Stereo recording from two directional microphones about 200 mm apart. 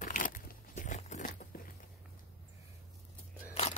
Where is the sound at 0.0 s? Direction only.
40° left (ahead or behind).